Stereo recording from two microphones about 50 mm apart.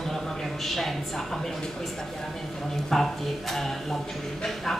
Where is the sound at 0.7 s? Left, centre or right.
Centre.